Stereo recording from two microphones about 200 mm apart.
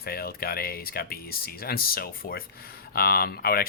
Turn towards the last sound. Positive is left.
turn(degrees=50)  # may be behind; listen again after turning